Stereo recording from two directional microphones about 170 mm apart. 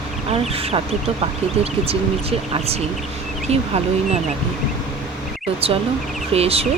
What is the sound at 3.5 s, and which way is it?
Speech, 40° right (ahead or behind).